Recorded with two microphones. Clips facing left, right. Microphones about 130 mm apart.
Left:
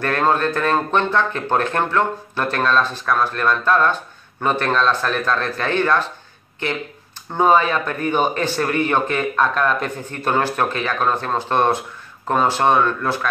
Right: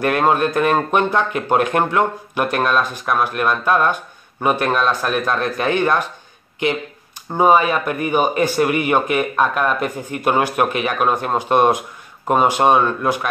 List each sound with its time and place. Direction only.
0.0 s speech: 15° right (ahead or behind)